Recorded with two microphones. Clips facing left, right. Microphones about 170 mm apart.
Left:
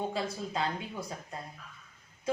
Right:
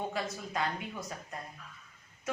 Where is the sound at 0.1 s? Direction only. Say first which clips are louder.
Left 2 dB; 30° left (ahead or behind).